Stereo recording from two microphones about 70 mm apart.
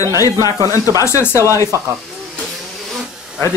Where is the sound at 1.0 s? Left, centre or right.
Left.